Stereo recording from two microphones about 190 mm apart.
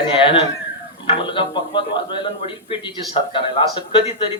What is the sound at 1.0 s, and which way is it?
Speech, 25° left (ahead or behind).